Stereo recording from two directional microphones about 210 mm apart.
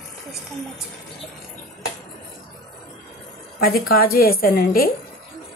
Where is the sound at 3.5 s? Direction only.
45° left (ahead or behind).